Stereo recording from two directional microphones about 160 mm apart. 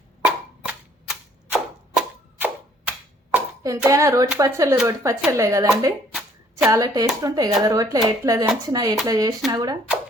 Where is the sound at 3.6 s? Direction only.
20° right (ahead or behind).